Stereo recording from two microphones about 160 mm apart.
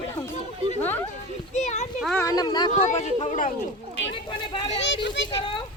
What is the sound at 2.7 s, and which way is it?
Speech, 45° left (ahead or behind).